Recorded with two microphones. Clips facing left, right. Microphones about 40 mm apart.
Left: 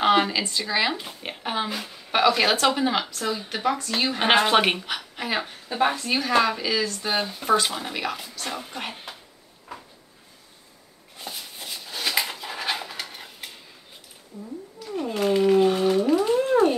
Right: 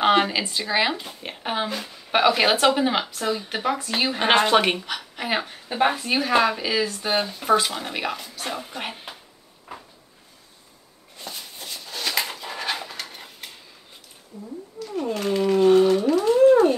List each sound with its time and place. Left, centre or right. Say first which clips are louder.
0.0 s speech: right 1 dB; centre
0.9 s speech: even; centre
1.4 s speech: right 1 dB; centre
1.7 s a woman's voice: right 1 dB; centre
2.1 s speech: right 1 dB; centre
4.2 s a woman's voice: right 1 dB; centre
5.7 s speech: right 2 dB; centre
9.1 s a sound: right 1 dB; centre
9.7 s cupboard open or close: right 1 dB; centre
11.1 s a sound: even; centre
14.9 s a sound: left 1 dB; centre